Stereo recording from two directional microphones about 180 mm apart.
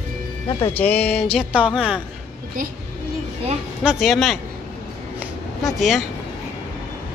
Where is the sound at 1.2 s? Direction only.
5° right (ahead or behind).